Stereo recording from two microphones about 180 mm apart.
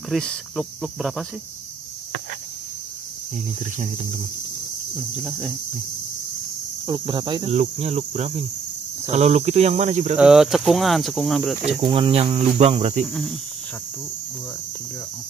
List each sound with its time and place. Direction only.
0.1 s speech: 5° left (ahead or behind)
4.9 s speech: 5° right (ahead or behind)
6.9 s speech: 25° right (ahead or behind)
10.1 s speech: 5° right (ahead or behind)
11.8 s speech: 30° right (ahead or behind)
13.0 s speech: centre (ahead or behind)